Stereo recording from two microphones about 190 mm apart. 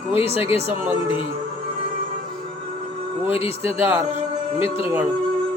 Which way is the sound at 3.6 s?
10° right (ahead or behind).